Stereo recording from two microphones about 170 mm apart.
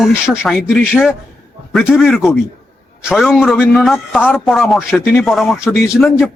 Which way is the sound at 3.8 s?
Centre (ahead or behind).